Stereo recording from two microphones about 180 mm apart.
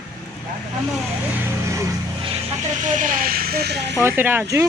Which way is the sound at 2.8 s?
45° right (ahead or behind).